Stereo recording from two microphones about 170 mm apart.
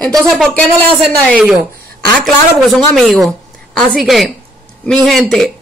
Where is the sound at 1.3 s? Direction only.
10° right (ahead or behind).